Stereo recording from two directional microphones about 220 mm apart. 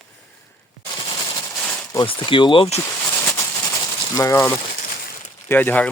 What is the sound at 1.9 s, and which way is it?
Speech, 20° left (ahead or behind).